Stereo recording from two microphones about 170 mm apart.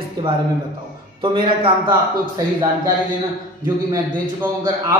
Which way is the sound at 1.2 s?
30° right (ahead or behind).